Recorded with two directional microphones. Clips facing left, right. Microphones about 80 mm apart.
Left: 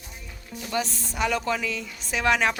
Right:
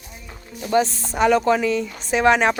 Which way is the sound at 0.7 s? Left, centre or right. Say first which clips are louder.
Right 10 dB; right.